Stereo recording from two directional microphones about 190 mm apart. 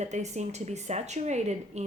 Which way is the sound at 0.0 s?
35° right (ahead or behind).